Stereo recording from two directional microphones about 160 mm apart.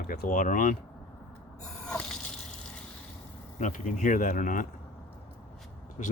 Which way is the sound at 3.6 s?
45° left (ahead or behind).